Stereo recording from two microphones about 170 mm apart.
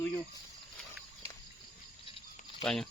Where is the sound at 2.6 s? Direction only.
Centre (ahead or behind).